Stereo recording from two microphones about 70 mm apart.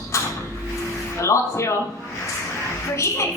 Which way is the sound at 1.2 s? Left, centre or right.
Left.